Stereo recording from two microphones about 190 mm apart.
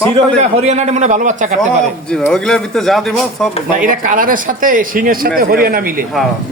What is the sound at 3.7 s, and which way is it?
Speech, 45° right (ahead or behind).